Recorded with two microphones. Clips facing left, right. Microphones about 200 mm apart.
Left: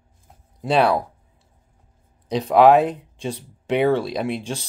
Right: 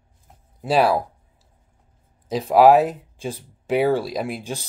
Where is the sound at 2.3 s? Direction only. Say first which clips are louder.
Even; 5° right (ahead or behind).